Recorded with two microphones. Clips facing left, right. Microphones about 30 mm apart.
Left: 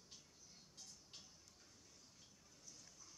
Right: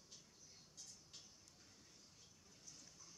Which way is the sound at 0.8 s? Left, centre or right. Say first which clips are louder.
Even; centre.